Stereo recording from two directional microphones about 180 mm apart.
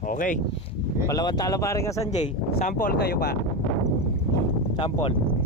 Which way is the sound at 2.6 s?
55° left (ahead or behind).